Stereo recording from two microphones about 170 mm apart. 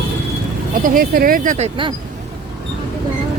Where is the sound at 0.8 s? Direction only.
60° right (ahead or behind).